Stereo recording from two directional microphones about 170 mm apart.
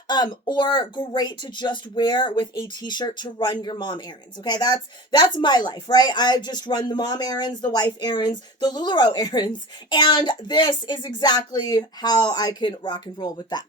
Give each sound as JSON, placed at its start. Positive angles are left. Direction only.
{"t": 0.4, "sound": "speech", "side_deg": 25}